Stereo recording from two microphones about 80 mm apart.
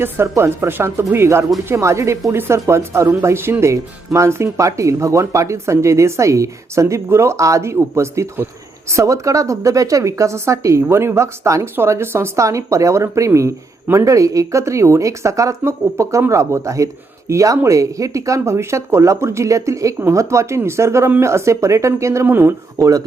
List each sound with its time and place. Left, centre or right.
0.0 s speech: right
22.3 s speech: right
22.8 s speech: right